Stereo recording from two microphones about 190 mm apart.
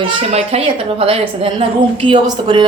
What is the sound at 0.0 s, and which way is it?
A woman's voice, 30° right (ahead or behind).